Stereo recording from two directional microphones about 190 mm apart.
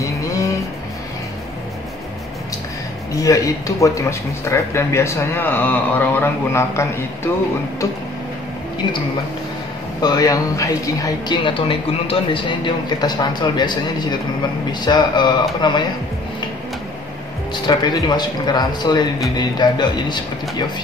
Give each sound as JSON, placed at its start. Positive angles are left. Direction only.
{"t": 0.0, "sound": "music", "side_deg": 15}
{"t": 3.2, "sound": "speech", "side_deg": 15}
{"t": 10.0, "sound": "a woman's voice", "side_deg": 20}
{"t": 17.6, "sound": "a woman's voice", "side_deg": 25}